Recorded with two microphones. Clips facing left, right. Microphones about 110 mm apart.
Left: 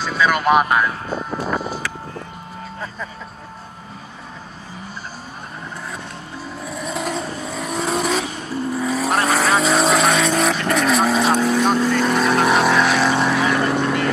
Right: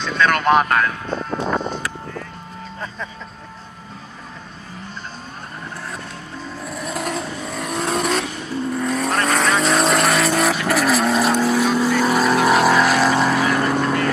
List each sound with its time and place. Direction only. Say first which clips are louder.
0.0 s speech: even; 5° left (ahead or behind)
1.5 s music: right 1 dB; 5° left (ahead or behind)
6.6 s vehicle: left 1 dB; centre (ahead or behind)